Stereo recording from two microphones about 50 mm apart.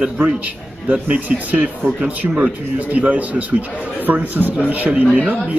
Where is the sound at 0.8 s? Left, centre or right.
Right.